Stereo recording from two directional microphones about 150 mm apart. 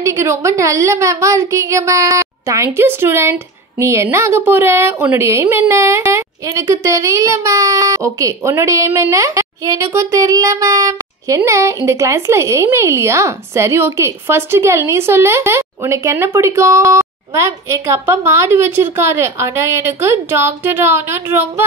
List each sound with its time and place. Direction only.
0.0 s a woman's voice: 20° right (ahead or behind)